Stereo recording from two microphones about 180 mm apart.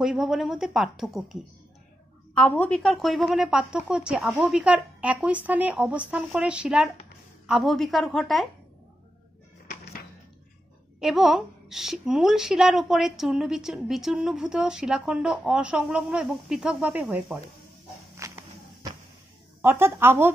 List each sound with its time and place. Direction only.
0.0 s a woman's voice: centre (ahead or behind)
11.0 s a woman's voice: centre (ahead or behind)
18.1 s walk: 15° right (ahead or behind)
19.6 s speech: 10° right (ahead or behind)